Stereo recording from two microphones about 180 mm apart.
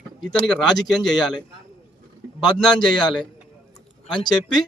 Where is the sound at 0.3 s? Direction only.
5° left (ahead or behind).